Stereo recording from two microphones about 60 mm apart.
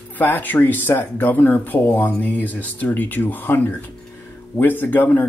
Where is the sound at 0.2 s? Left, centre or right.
Left.